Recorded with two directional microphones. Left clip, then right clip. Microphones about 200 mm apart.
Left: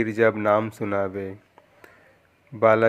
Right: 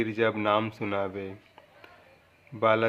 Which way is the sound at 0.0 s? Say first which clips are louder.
Left 6 dB; 20° left (ahead or behind).